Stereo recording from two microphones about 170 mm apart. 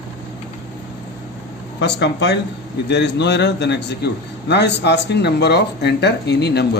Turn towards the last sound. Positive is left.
turn(degrees=80)